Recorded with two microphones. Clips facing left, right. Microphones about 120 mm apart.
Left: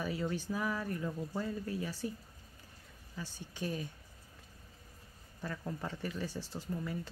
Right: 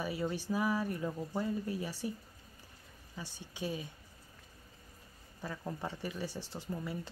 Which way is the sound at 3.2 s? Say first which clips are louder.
Even; 15° right (ahead or behind).